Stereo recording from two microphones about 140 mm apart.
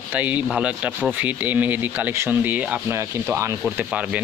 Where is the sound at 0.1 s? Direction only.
10° right (ahead or behind).